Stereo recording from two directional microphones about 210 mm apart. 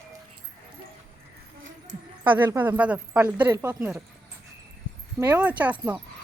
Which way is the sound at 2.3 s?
10° right (ahead or behind).